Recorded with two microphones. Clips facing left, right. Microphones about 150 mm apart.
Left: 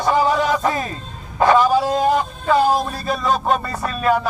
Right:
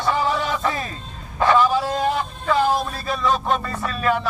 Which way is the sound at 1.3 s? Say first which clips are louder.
Left 3 dB; 40° left (ahead or behind).